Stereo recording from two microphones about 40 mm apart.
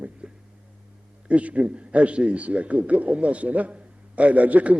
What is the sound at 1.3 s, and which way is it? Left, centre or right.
A man's voice, right.